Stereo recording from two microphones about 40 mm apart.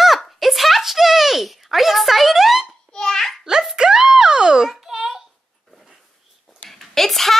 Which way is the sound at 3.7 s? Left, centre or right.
Centre.